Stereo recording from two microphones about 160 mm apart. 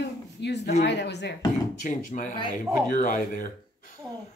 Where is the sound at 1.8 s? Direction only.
50° left (ahead or behind).